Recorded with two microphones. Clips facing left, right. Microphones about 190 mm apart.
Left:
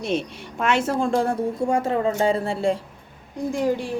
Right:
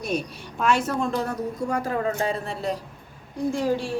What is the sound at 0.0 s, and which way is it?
A woman's voice, 25° left (ahead or behind).